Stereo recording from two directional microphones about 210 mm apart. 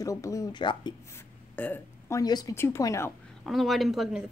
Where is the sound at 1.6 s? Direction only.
10° left (ahead or behind).